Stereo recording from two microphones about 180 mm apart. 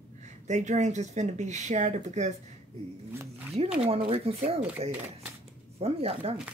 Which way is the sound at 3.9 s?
35° right (ahead or behind).